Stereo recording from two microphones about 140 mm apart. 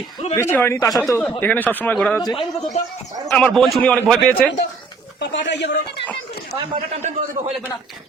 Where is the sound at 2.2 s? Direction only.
30° left (ahead or behind).